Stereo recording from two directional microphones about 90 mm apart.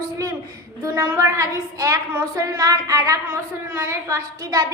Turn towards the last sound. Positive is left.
turn(degrees=-30)  # may be behind; listen again after turning